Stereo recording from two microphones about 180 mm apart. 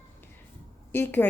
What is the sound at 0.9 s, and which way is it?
Speech, 10° left (ahead or behind).